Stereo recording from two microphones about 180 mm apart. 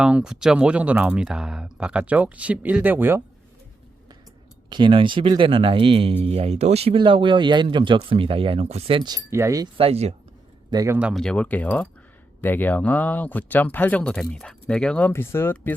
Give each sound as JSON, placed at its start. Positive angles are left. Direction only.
{"t": 0.0, "sound": "speech", "side_deg": -5}
{"t": 4.7, "sound": "speech", "side_deg": -30}
{"t": 9.7, "sound": "speech", "side_deg": -35}
{"t": 10.7, "sound": "speech", "side_deg": -20}
{"t": 11.1, "sound": "speech", "side_deg": 5}